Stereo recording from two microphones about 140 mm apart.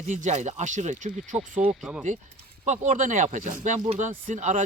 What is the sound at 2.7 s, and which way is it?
Speech, 65° right (ahead or behind).